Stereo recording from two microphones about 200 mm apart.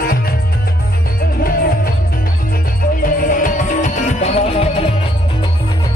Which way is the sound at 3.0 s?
40° left (ahead or behind).